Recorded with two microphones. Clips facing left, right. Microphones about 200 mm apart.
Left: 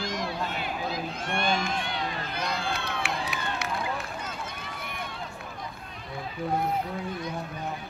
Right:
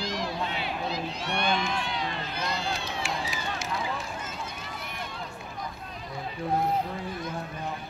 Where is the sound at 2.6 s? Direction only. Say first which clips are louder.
Left 1 dB; 55° left (ahead or behind).